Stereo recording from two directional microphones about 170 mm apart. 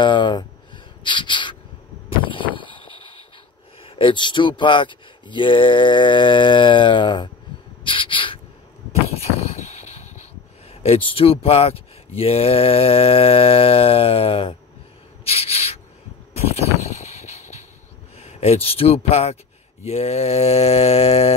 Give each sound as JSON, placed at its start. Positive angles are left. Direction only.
{"t": 0.0, "sound": "speech", "side_deg": 30}
{"t": 1.0, "sound": "a sound", "side_deg": 30}
{"t": 2.2, "sound": "vehicle", "side_deg": 30}
{"t": 3.8, "sound": "speech", "side_deg": 30}
{"t": 7.8, "sound": "a sound", "side_deg": 30}
{"t": 10.7, "sound": "speech", "side_deg": 35}
{"t": 15.2, "sound": "a sound", "side_deg": 35}
{"t": 16.5, "sound": "vehicle", "side_deg": 40}
{"t": 18.1, "sound": "speech", "side_deg": 40}